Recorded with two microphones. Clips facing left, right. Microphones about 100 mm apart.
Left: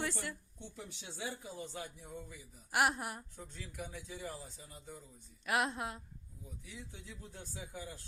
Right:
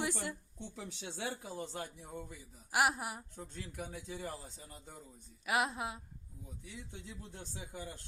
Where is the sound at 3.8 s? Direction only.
35° right (ahead or behind).